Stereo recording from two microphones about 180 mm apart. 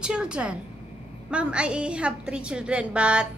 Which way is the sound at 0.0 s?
5° right (ahead or behind).